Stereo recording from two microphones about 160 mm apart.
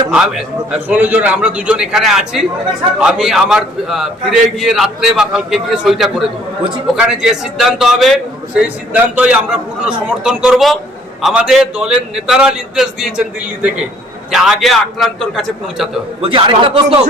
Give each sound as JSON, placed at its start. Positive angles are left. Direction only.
{"t": 0.1, "sound": "a man's voice", "side_deg": -5}
{"t": 16.2, "sound": "speech", "side_deg": -30}